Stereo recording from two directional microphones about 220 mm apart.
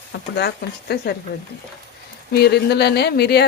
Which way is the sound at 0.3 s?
50° left (ahead or behind).